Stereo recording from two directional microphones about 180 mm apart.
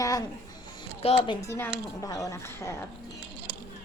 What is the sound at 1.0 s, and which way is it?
Speech, 35° left (ahead or behind).